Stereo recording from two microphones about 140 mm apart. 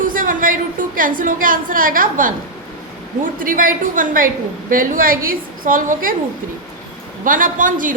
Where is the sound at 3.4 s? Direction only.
80° right.